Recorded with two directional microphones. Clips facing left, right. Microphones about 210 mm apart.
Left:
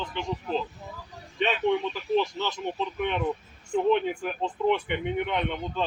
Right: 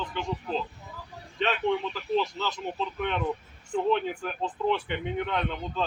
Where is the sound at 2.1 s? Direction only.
15° left (ahead or behind).